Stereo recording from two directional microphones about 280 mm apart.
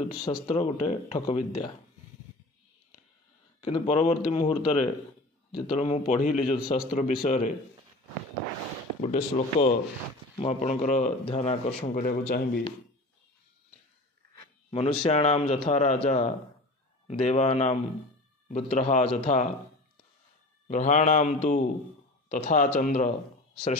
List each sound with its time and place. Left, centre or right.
0.2 s speech: centre
3.6 s speech: left
9.0 s speech: left
14.7 s speech: centre
20.6 s speech: left